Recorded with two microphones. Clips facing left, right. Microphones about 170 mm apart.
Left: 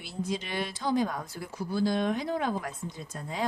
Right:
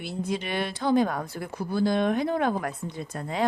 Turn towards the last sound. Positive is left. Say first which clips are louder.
# right 6 dB
turn(degrees=-65)  # may be behind; listen again after turning